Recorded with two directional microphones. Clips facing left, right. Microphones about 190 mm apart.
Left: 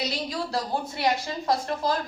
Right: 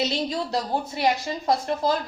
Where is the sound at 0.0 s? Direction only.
25° right (ahead or behind).